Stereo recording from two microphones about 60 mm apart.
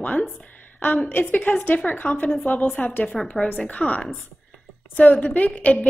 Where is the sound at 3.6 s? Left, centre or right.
Left.